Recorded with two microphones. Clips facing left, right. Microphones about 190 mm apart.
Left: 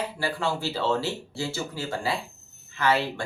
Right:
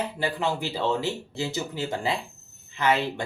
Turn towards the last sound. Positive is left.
turn(degrees=-20)  # may be behind; listen again after turning